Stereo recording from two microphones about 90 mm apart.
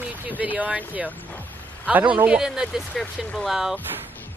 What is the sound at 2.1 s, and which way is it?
Speech, 15° right (ahead or behind).